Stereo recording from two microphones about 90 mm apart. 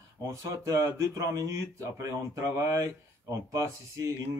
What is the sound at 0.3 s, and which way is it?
Speech, 35° right (ahead or behind).